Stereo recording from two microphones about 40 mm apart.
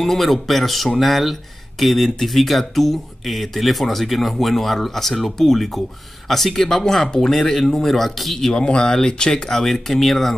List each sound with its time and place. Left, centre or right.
0.0 s speech: centre
8.6 s speech: left; by 10.3 s centre